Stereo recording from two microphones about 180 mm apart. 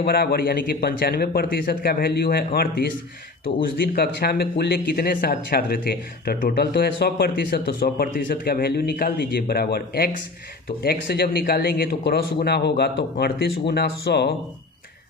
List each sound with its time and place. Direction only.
0.0 s speech: 60° left (ahead or behind)
3.9 s speech: 60° left (ahead or behind)